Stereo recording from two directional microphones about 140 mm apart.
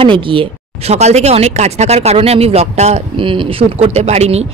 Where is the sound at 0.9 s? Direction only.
50° right (ahead or behind).